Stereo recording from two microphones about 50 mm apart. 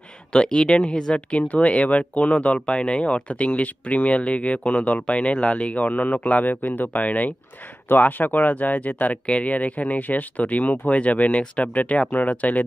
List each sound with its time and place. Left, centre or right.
0.3 s speech: centre